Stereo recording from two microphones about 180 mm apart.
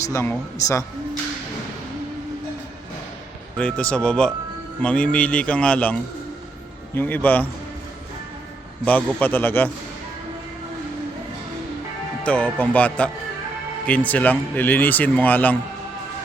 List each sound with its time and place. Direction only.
0.1 s a man's voice: 15° left (ahead or behind)
3.6 s a man's voice: 5° left (ahead or behind)
8.8 s a man's voice: 10° left (ahead or behind)
12.2 s a man's voice: 5° left (ahead or behind)